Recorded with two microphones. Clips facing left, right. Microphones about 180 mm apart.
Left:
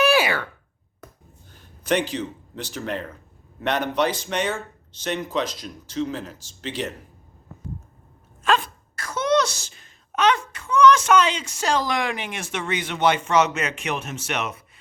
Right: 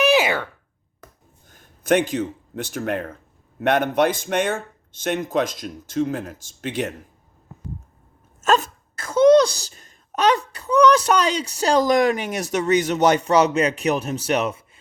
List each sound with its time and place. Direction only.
0.0 s a sound: 20° right (ahead or behind)
1.5 s a man's voice: 45° right (ahead or behind)
8.4 s dog: 45° right (ahead or behind)
9.0 s speech: 30° right (ahead or behind)